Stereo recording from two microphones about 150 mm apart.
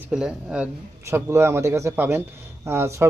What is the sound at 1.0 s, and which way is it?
Speech, 15° right (ahead or behind).